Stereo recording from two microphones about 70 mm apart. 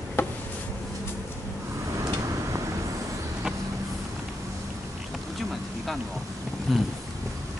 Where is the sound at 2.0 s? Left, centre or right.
Right.